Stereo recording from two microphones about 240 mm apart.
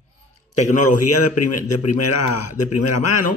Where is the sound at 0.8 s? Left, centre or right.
Left.